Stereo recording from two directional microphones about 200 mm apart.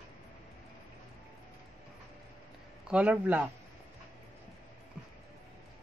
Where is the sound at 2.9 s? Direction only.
5° right (ahead or behind).